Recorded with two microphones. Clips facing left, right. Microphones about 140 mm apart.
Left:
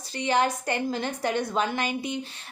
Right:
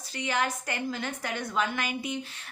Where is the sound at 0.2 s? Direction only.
30° left (ahead or behind).